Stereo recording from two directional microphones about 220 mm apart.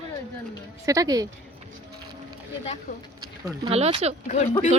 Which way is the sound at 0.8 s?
15° right (ahead or behind).